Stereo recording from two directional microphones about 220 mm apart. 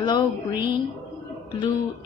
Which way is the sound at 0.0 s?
20° left (ahead or behind).